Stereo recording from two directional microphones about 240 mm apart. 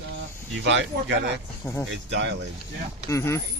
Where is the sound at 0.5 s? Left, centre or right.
Right.